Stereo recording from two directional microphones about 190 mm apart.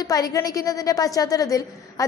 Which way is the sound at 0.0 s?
20° left (ahead or behind).